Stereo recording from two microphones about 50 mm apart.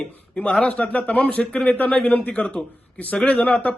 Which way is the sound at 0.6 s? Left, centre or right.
Left.